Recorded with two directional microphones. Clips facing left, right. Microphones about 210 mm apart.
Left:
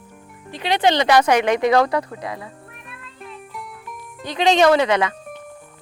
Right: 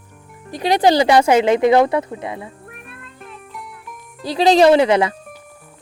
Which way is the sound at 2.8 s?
50° right (ahead or behind).